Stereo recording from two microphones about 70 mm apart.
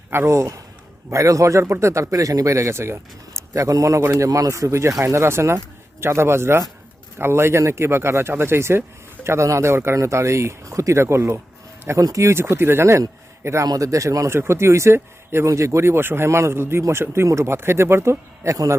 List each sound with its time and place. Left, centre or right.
0.1 s a man's voice: right
4.3 s a man's voice: right
12.0 s speech: right
12.3 s a man's voice: right
14.3 s a man's voice: right
18.5 s a man's voice: right